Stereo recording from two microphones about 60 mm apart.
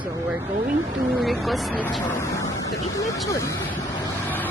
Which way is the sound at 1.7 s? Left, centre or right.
Left.